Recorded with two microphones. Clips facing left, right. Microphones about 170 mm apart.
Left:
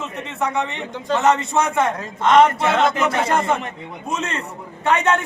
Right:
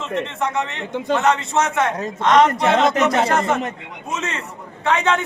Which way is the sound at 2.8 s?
40° right (ahead or behind).